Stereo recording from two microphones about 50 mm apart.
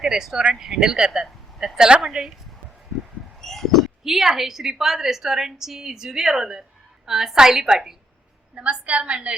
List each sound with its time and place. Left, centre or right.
0.0 s a woman's voice: centre
3.4 s owl: centre
4.0 s a woman's voice: centre
8.6 s a woman's voice: right